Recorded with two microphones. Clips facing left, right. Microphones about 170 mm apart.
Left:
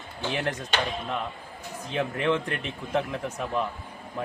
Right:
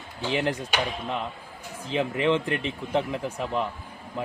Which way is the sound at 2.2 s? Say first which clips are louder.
Right 3 dB; 25° right (ahead or behind).